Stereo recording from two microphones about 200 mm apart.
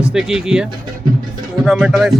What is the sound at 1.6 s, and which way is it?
Music, centre (ahead or behind).